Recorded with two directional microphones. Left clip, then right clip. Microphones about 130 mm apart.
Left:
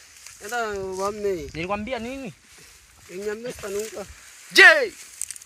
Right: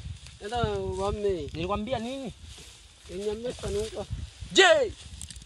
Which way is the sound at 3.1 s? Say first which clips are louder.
Left 2 dB; 55° right (ahead or behind).